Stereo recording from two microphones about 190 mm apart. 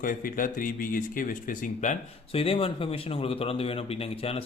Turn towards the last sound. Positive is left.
turn(degrees=30)  # may be behind; listen again after turning